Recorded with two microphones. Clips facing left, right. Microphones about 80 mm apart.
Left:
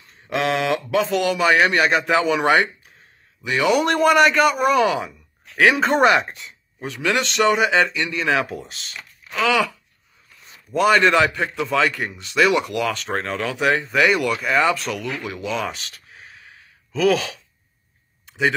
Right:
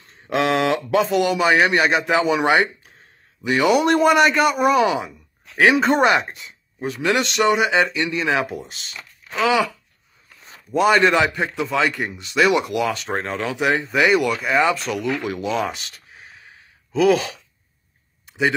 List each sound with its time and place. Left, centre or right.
0.3 s speech: right
1.0 s speech: centre
3.4 s speech: right
3.7 s speech: centre
6.4 s speech: centre
10.7 s speech: centre
15.2 s speech: right
15.7 s a sound: centre
16.9 s speech: centre